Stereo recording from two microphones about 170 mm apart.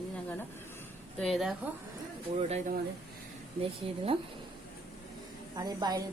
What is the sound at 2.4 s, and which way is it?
Speech, 40° right (ahead or behind).